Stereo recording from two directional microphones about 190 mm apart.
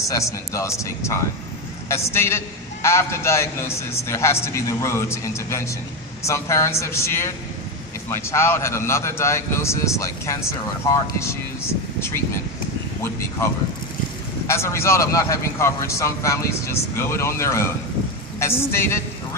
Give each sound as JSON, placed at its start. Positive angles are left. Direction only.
{"t": 0.1, "sound": "a man's voice", "side_deg": 15}
{"t": 13.4, "sound": "a man's voice", "side_deg": 15}